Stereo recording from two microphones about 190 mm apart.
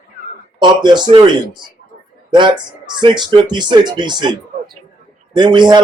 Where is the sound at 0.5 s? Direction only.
25° right (ahead or behind).